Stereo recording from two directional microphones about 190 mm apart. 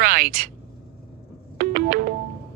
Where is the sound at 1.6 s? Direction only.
50° right (ahead or behind).